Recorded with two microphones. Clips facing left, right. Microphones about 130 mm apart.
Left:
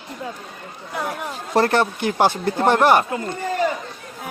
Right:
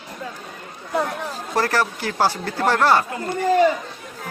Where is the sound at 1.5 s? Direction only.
25° left (ahead or behind).